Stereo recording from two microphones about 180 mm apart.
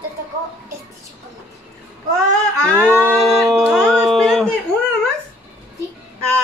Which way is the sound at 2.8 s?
15° right (ahead or behind).